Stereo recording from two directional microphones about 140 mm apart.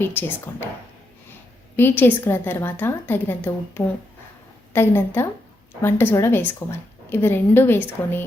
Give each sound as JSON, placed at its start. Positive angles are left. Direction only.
{"t": 0.0, "sound": "a woman's voice", "side_deg": 15}
{"t": 1.7, "sound": "a woman's voice", "side_deg": 15}